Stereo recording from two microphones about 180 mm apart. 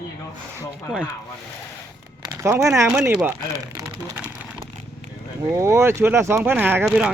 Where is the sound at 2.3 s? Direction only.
15° right (ahead or behind).